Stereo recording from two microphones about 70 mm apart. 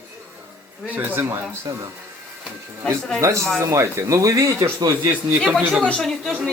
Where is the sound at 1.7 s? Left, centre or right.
Right.